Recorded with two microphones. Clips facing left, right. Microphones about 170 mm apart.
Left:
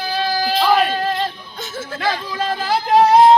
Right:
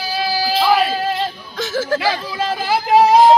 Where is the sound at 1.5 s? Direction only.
90° right.